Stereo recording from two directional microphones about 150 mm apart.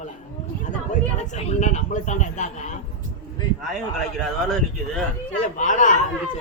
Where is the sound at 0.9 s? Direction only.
50° left (ahead or behind).